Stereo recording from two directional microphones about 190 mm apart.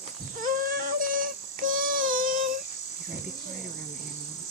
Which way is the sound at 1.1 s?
45° right (ahead or behind).